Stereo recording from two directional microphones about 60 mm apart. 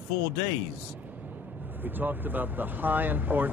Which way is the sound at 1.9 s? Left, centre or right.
Right.